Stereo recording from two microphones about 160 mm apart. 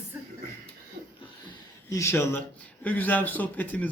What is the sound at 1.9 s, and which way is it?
Speech, 20° left (ahead or behind).